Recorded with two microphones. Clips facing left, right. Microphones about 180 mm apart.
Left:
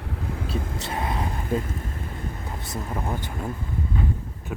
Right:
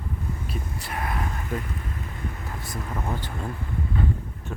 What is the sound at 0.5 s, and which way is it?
Speech, 90° left.